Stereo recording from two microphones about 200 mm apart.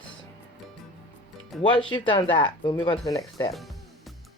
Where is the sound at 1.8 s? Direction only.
25° left (ahead or behind).